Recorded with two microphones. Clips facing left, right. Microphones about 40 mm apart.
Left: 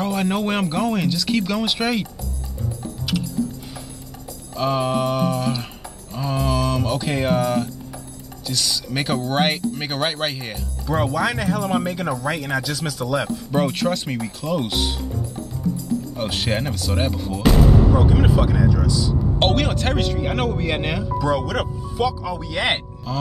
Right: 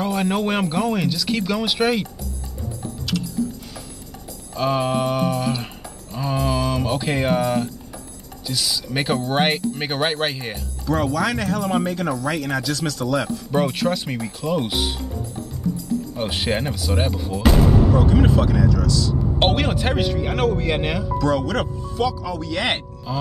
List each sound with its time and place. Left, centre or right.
0.0 s speech: centre
4.6 s speech: centre
10.9 s speech: centre
16.2 s speech: centre
19.4 s speech: centre
23.1 s speech: centre